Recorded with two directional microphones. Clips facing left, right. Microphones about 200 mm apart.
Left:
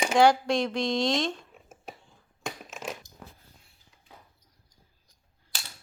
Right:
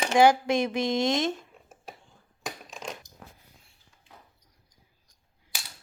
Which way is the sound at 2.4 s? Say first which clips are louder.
Left 1 dB; centre (ahead or behind).